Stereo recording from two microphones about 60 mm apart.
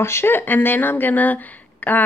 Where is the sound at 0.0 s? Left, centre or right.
Left.